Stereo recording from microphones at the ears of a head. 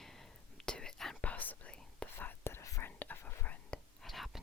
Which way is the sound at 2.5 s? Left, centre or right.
Left.